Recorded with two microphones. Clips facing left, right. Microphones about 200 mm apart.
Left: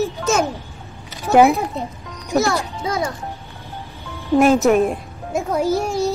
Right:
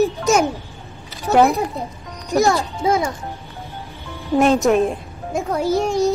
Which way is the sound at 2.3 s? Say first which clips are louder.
Right 2 dB; 15° right (ahead or behind).